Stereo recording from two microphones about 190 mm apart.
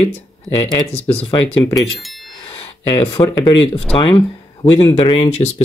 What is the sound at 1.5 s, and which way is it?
Speech, 15° left (ahead or behind).